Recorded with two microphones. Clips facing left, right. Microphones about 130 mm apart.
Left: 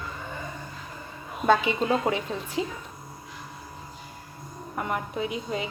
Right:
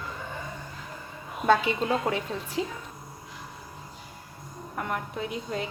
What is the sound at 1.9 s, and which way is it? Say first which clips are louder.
Speech: left 2 dB; 10° left (ahead or behind).